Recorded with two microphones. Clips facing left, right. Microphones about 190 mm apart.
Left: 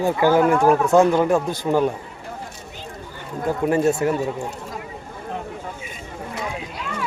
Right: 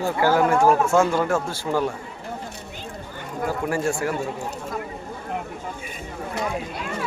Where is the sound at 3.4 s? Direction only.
20° left (ahead or behind).